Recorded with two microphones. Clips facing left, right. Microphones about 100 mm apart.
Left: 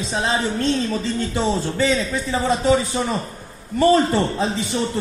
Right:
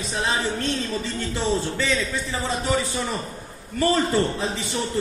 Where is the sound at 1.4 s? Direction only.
25° left (ahead or behind).